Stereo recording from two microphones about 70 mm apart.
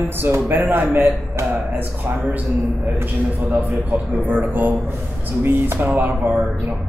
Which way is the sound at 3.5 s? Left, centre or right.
Right.